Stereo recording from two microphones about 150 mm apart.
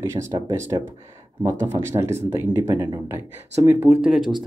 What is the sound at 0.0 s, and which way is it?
Speech, 20° right (ahead or behind).